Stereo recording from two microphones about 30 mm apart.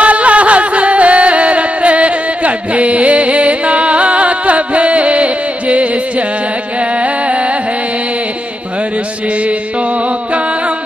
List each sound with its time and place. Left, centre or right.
0.0 s music: right